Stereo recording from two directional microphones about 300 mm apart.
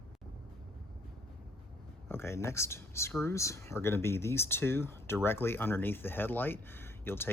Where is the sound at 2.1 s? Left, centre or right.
Centre.